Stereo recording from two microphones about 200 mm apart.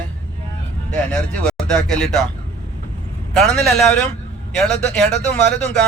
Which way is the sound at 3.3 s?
Centre (ahead or behind).